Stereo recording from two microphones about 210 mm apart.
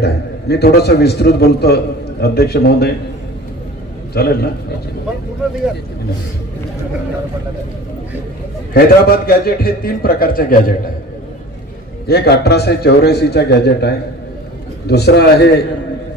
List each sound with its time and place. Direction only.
0.0 s a man's voice: 50° left (ahead or behind)
4.1 s a man's voice: 50° left (ahead or behind)
8.7 s a man's voice: 45° left (ahead or behind)
12.1 s a man's voice: 50° left (ahead or behind)